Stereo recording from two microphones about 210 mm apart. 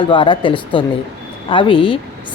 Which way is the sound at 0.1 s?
20° left (ahead or behind).